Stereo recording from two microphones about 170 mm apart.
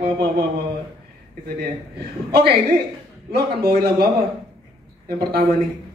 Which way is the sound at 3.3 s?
65° right (ahead or behind).